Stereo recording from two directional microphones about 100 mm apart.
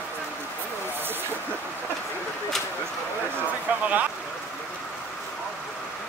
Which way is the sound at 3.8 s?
15° right (ahead or behind).